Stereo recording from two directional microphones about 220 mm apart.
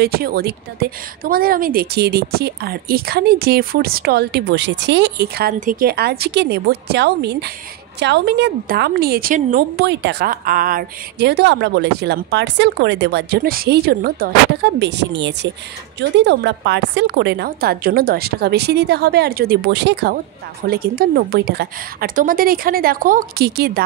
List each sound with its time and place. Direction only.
0.0 s a woman's voice: 45° right (ahead or behind)